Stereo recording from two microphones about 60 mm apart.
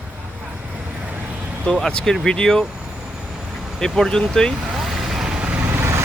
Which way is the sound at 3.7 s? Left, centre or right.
Centre.